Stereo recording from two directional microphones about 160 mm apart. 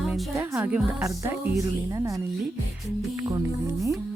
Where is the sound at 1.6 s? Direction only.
20° right (ahead or behind).